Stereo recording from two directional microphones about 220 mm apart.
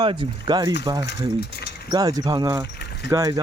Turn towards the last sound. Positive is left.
turn(degrees=-15)  # may be behind; listen again after turning